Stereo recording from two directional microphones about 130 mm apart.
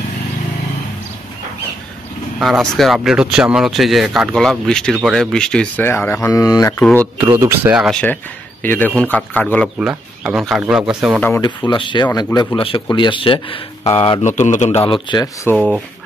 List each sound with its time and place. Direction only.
2.4 s speech: centre (ahead or behind)
5.9 s a man's voice: 15° left (ahead or behind)
6.3 s speech: 25° left (ahead or behind)
6.8 s a man's voice: 10° left (ahead or behind)
7.2 s speech: 20° right (ahead or behind)
7.7 s speech: 5° right (ahead or behind)
8.6 s a man's voice: 15° left (ahead or behind)
9.8 s a man's voice: 5° right (ahead or behind)
11.4 s speech: 35° left (ahead or behind)
12.1 s speech: 25° left (ahead or behind)
12.5 s speech: 40° left (ahead or behind)
14.2 s a man's voice: 70° left (ahead or behind)
14.9 s speech: 35° left (ahead or behind)
15.5 s speech: 5° right (ahead or behind)